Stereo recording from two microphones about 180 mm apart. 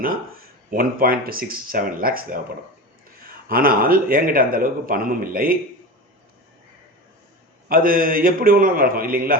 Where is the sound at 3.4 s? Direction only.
55° right (ahead or behind).